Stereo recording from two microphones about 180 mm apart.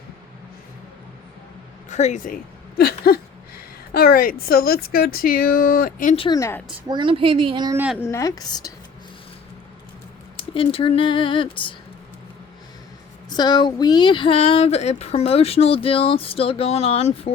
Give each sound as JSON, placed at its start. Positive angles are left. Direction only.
{"t": 1.9, "sound": "speech", "side_deg": 40}
{"t": 6.1, "sound": "speech", "side_deg": 25}
{"t": 6.8, "sound": "speech", "side_deg": -25}
{"t": 8.0, "sound": "speech", "side_deg": 15}
{"t": 10.5, "sound": "speech", "side_deg": 30}
{"t": 13.3, "sound": "speech", "side_deg": 25}